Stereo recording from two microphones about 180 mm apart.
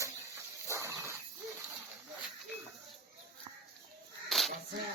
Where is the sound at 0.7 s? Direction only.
15° right (ahead or behind).